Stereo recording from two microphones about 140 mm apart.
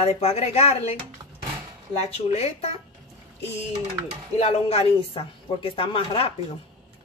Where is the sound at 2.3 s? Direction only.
45° left (ahead or behind).